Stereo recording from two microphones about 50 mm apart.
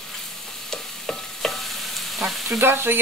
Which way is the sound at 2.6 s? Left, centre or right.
Right.